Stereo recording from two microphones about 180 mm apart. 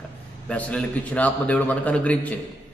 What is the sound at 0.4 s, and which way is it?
A man's voice, 5° left (ahead or behind).